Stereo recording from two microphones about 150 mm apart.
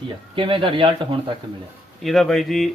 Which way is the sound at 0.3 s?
35° right (ahead or behind).